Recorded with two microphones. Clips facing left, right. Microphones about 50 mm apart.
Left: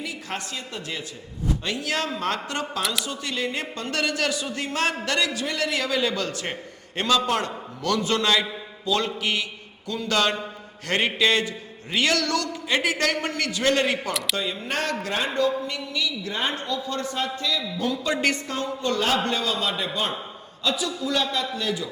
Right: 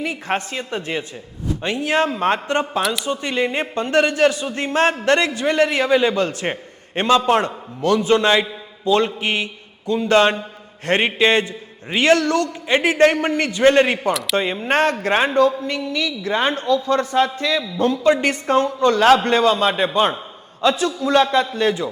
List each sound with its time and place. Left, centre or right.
0.0 s a man's voice: right
14.1 s speech: centre
14.3 s a man's voice: right